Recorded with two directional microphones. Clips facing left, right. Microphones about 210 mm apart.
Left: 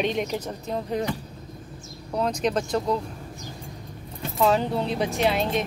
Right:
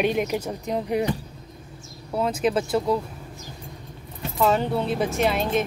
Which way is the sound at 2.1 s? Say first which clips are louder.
Right 2 dB; 5° right (ahead or behind).